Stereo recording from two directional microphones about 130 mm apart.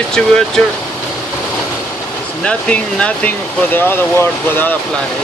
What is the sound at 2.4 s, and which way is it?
Speech, 10° left (ahead or behind).